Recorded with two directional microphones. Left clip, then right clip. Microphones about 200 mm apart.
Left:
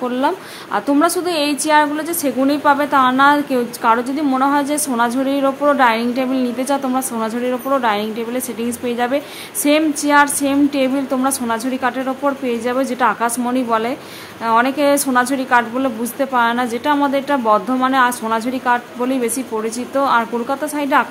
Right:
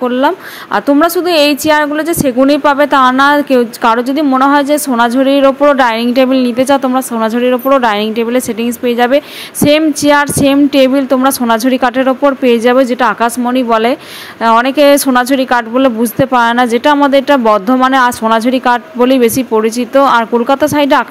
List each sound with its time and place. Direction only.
0.0 s a woman's voice: 25° right (ahead or behind)